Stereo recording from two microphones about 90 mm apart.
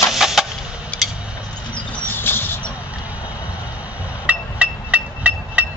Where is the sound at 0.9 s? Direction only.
15° left (ahead or behind).